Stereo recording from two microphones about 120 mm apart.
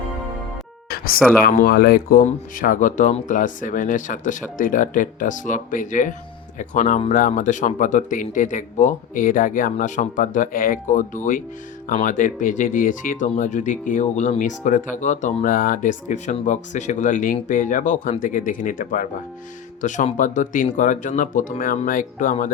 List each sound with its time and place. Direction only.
1.2 s speech: centre (ahead or behind)
2.2 s speech: 90° left